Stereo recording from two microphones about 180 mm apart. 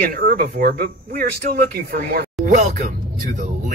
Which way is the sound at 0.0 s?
55° right (ahead or behind).